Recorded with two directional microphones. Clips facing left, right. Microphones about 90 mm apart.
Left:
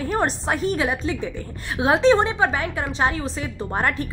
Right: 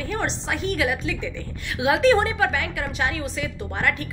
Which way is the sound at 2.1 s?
25° left (ahead or behind).